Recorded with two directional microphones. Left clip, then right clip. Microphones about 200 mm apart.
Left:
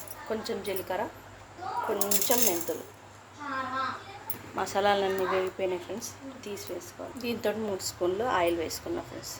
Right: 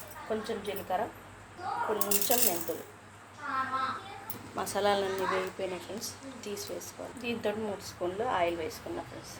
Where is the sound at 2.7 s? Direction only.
20° left (ahead or behind).